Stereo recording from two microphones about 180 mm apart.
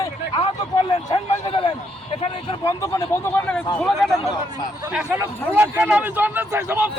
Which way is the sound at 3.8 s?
Centre (ahead or behind).